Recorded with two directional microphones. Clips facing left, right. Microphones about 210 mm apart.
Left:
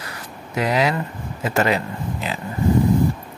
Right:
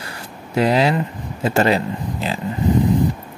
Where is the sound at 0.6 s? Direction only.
30° right (ahead or behind).